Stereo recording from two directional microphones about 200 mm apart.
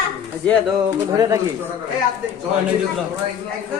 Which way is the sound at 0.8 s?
15° right (ahead or behind).